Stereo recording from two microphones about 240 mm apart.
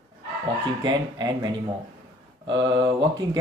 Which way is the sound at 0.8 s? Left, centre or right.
Centre.